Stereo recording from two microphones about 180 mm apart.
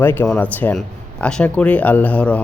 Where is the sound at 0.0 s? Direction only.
10° left (ahead or behind).